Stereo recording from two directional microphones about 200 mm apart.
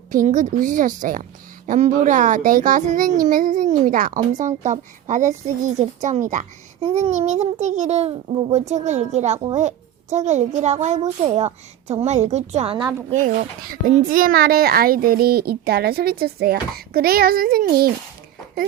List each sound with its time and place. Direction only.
0.1 s a woman's voice: 40° right (ahead or behind)